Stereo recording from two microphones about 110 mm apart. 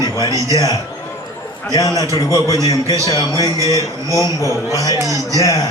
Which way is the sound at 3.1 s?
35° left (ahead or behind).